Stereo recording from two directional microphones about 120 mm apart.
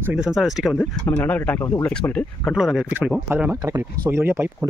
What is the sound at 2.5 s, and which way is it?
Speech, 5° right (ahead or behind).